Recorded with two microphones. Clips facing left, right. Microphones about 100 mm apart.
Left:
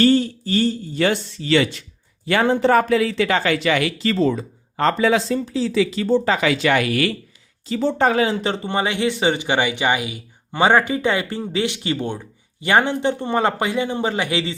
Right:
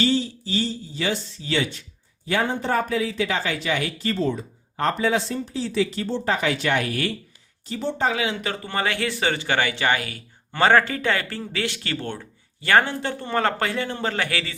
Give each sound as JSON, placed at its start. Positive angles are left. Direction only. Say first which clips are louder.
{"t": 0.0, "sound": "a man's voice", "louder": "left 6 dB", "side_deg": 55}
{"t": 7.7, "sound": "speech", "louder": "left 6 dB", "side_deg": 65}
{"t": 8.1, "sound": "speech", "louder": "left 7 dB", "side_deg": 40}
{"t": 8.4, "sound": "speech", "louder": "left 5 dB", "side_deg": 25}